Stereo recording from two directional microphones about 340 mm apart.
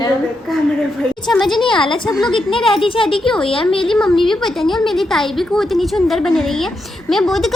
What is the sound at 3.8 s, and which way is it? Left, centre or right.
A woman's voice, centre.